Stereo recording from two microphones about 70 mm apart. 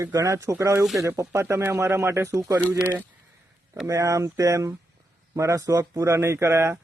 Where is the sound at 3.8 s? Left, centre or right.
Right.